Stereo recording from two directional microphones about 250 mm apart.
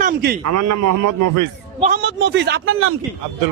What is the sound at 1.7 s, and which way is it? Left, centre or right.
Speech, right.